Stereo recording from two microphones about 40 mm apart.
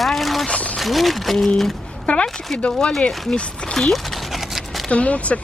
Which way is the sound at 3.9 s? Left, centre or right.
Centre.